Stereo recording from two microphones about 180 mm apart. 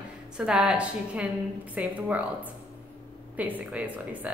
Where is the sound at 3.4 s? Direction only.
10° right (ahead or behind).